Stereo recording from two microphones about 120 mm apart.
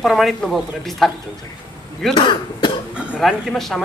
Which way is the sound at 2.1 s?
45° left (ahead or behind).